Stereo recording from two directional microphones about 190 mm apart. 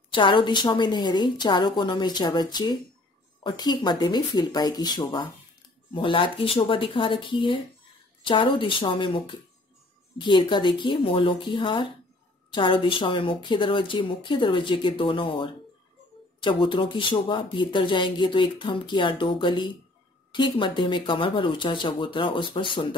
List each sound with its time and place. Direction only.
0.1 s speech: 25° left (ahead or behind)